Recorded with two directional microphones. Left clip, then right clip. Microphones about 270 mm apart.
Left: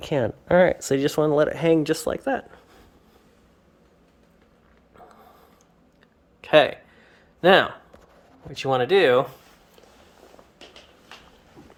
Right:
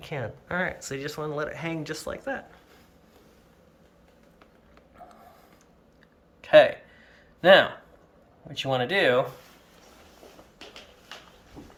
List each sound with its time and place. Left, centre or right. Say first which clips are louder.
0.0 s speech: left 10 dB; left
6.4 s a sound: right 1 dB; left
8.5 s speech: left 5 dB; centre